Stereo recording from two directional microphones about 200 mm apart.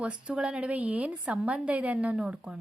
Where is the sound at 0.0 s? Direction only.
5° right (ahead or behind).